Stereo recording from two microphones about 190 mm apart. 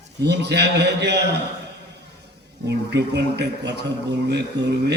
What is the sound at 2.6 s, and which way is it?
A man's voice, 65° right (ahead or behind).